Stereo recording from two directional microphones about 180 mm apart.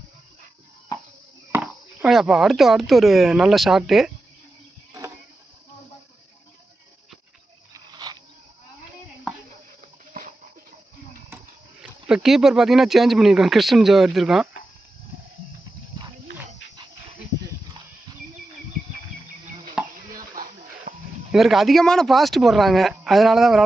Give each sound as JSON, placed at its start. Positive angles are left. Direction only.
{"t": 1.5, "sound": "speech", "side_deg": -5}
{"t": 7.7, "sound": "a sound", "side_deg": -25}
{"t": 10.2, "sound": "a sound", "side_deg": -50}
{"t": 11.8, "sound": "speech", "side_deg": -5}
{"t": 19.8, "sound": "chopping", "side_deg": -5}
{"t": 20.1, "sound": "music", "side_deg": -50}
{"t": 21.3, "sound": "speech", "side_deg": 0}